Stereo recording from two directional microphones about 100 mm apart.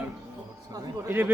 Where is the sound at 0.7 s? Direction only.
35° right (ahead or behind).